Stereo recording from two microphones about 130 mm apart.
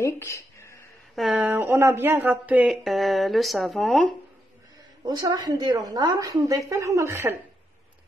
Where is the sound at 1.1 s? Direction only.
Centre (ahead or behind).